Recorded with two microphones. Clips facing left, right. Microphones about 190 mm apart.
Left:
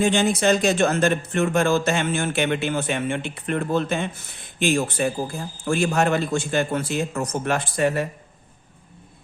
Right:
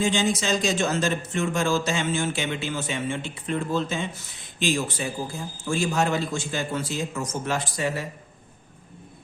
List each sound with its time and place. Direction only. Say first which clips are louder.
0.0 s a man's voice: left 5 dB; 60° left (ahead or behind)